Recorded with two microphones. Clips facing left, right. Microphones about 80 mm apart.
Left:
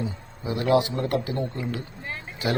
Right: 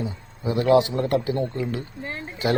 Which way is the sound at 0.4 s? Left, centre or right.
Right.